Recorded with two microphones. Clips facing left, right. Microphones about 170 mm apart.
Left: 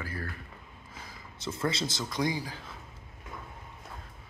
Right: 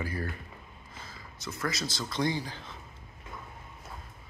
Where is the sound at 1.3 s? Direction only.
30° left (ahead or behind); by 2.7 s 5° left (ahead or behind).